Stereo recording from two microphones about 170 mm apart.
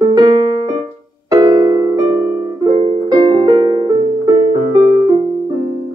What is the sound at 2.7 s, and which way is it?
Music, 25° right (ahead or behind).